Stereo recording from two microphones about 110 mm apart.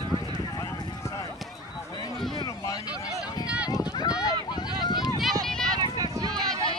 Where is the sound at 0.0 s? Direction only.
45° right (ahead or behind).